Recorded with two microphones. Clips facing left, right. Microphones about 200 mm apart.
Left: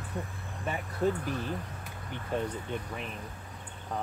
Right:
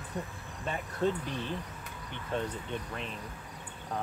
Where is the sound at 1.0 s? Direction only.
25° right (ahead or behind).